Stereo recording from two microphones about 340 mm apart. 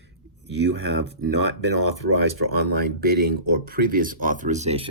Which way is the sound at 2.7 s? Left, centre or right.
Right.